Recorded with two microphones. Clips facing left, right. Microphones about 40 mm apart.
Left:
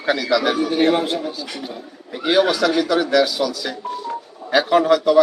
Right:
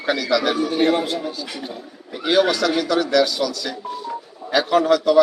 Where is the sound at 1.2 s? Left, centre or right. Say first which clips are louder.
Left 1 dB; centre.